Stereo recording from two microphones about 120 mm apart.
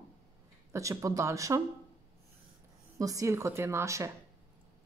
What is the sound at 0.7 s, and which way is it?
Speech, 25° right (ahead or behind).